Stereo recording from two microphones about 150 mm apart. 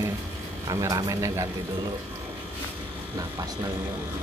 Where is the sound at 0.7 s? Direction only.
25° right (ahead or behind).